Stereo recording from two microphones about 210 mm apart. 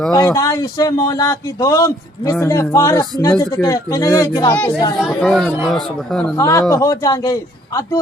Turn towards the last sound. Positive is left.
turn(degrees=15)  # may be behind; listen again after turning